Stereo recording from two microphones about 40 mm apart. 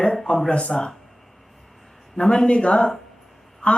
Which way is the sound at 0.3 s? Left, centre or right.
Centre.